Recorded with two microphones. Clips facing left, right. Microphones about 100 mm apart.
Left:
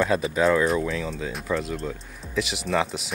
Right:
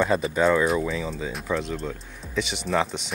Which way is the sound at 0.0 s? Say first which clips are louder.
Even; centre (ahead or behind).